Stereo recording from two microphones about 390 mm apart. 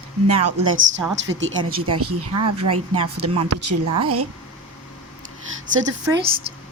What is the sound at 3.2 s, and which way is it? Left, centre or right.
Speech, right.